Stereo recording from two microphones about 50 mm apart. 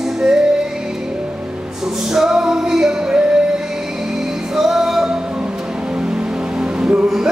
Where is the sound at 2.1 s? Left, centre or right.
Centre.